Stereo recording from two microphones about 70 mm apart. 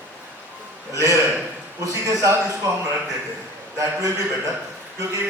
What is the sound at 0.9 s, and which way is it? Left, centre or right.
A man's voice, right.